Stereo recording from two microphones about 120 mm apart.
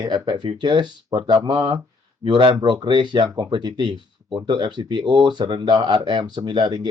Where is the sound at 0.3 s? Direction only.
40° right (ahead or behind).